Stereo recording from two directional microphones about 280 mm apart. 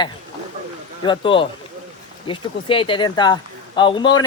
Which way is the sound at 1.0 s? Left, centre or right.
Centre.